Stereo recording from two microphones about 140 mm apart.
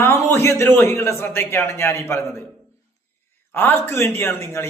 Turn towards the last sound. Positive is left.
turn(degrees=15)  # may be behind; listen again after turning